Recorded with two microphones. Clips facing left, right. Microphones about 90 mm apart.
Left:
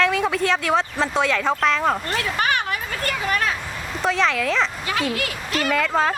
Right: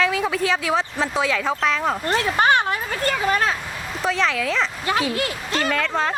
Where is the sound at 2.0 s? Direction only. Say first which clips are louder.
Right 4 dB; 30° right (ahead or behind).